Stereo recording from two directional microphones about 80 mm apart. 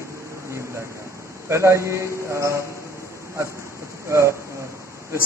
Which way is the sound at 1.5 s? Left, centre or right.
Right.